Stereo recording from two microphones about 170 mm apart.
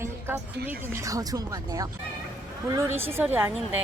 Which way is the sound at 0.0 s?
15° right (ahead or behind).